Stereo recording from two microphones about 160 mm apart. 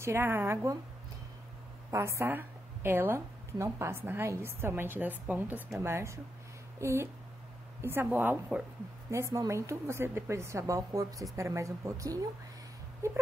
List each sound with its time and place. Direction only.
0.0 s a woman's voice: 15° right (ahead or behind)
1.9 s a woman's voice: 15° right (ahead or behind)